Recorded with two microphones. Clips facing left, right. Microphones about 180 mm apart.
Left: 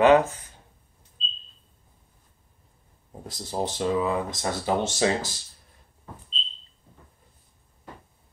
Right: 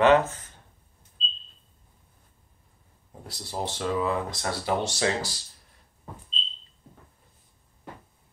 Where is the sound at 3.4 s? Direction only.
20° left (ahead or behind).